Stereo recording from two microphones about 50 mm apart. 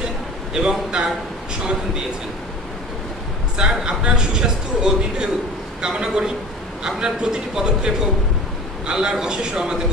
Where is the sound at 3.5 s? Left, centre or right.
Centre.